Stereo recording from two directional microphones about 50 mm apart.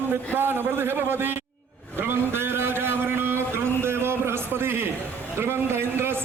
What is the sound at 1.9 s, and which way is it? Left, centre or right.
Vehicle, right.